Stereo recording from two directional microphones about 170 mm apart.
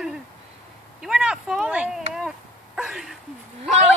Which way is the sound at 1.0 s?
5° right (ahead or behind).